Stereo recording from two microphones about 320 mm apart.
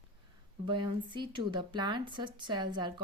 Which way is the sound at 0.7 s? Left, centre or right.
Centre.